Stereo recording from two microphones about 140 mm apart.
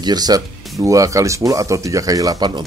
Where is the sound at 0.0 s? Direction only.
30° right (ahead or behind).